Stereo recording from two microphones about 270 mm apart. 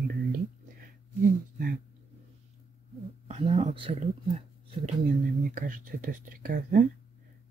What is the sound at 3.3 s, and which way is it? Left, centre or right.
Speech, right.